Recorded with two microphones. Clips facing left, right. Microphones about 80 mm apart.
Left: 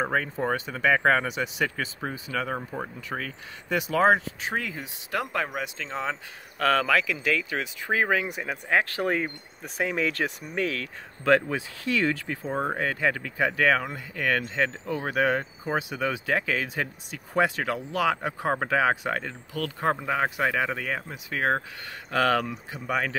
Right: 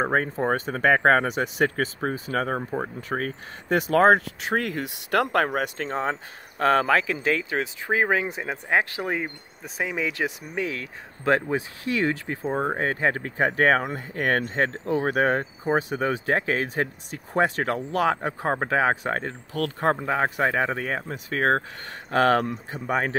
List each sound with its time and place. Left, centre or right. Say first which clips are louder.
0.0 s speech: right 3 dB; right
9.0 s speech: left 2 dB; centre
10.8 s speech: even; right
12.7 s speech: right 2 dB; right